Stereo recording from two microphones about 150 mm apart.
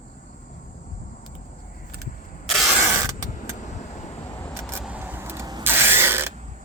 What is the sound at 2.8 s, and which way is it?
Mechanisms, 15° right (ahead or behind).